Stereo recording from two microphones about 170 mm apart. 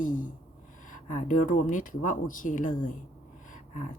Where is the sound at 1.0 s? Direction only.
45° left (ahead or behind).